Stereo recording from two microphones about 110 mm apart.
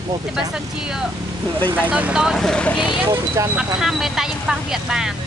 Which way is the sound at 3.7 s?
5° right (ahead or behind).